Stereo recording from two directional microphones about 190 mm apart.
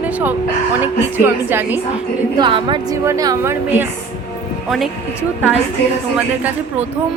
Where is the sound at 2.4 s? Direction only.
25° right (ahead or behind).